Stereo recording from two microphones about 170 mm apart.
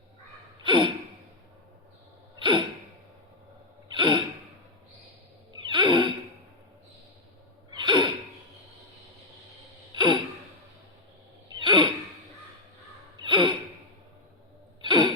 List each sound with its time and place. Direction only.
0.6 s gasp: 30° right (ahead or behind)
2.4 s gasp: 30° right (ahead or behind)
3.9 s gasp: 30° right (ahead or behind)
5.7 s a sound: 30° right (ahead or behind)
7.7 s gasp: 25° right (ahead or behind)
9.9 s gasp: 25° right (ahead or behind)
11.4 s a sound: 25° right (ahead or behind)
13.2 s a sound: 25° right (ahead or behind)
14.8 s gasp: 25° right (ahead or behind)